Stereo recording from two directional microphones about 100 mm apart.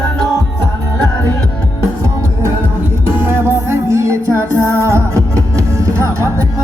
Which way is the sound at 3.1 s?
25° right (ahead or behind).